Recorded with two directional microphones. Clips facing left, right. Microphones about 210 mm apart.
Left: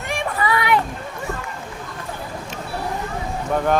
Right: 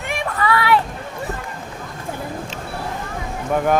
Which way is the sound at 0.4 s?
20° left (ahead or behind).